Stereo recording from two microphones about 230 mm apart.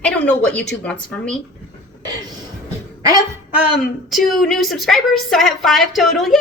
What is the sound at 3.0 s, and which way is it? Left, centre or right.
Speech, centre.